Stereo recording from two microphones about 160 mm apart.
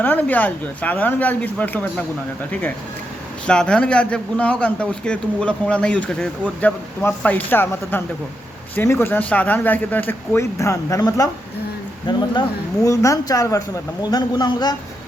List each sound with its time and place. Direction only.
0.0 s a man's voice: 10° left (ahead or behind); by 14.8 s 25° left (ahead or behind)